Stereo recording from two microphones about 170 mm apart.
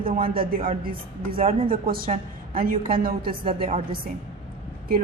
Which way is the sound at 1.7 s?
60° right (ahead or behind).